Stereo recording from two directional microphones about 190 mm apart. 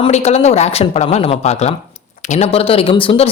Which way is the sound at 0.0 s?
35° left (ahead or behind).